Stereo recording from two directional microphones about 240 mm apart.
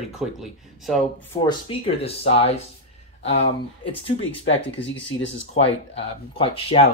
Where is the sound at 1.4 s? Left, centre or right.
Left.